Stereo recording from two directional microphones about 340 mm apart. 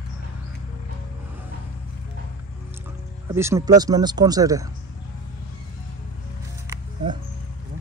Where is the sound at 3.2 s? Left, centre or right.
Centre.